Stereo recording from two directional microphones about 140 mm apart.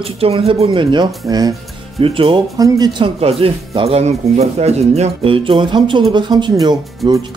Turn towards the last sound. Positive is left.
turn(degrees=-30)  # may be behind; listen again after turning